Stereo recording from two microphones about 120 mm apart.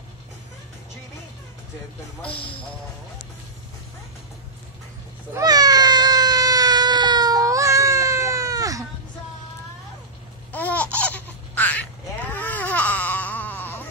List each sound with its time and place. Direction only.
5.3 s a sound: 30° right (ahead or behind)
10.5 s laughter: 15° left (ahead or behind)
11.5 s quack: 15° left (ahead or behind)